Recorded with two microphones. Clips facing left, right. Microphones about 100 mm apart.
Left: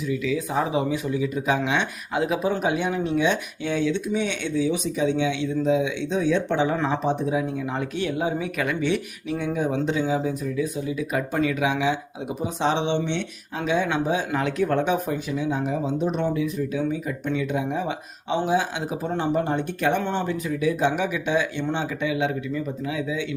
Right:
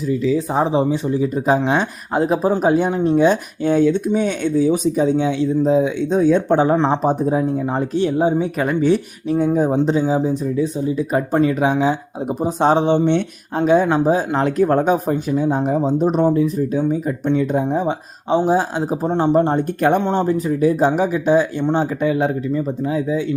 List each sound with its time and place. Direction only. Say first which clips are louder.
0.1 s speech: right 7 dB; 35° right (ahead or behind)